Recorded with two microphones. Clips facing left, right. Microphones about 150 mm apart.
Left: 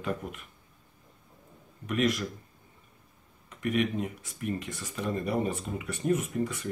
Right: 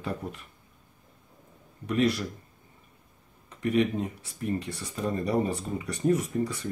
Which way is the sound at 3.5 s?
35° right (ahead or behind).